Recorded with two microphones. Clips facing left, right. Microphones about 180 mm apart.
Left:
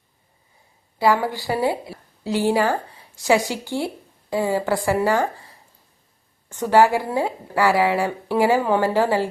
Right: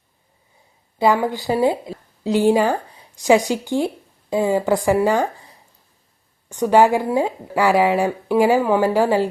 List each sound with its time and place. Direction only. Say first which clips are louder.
0.9 s a woman's voice: right 2 dB; 20° right (ahead or behind)
6.5 s speech: right 2 dB; 15° right (ahead or behind)